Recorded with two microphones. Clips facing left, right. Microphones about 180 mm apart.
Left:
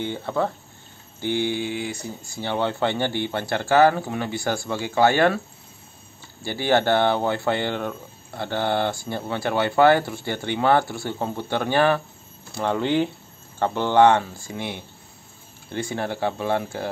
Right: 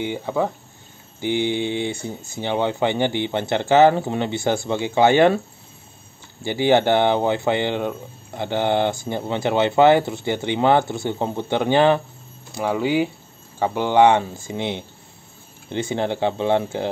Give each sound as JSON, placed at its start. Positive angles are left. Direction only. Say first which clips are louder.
{"t": 0.0, "sound": "speech", "louder": "right 2 dB", "side_deg": -15}
{"t": 6.4, "sound": "speech", "louder": "right 4 dB", "side_deg": -20}
{"t": 12.5, "sound": "speech", "louder": "right 1 dB", "side_deg": -10}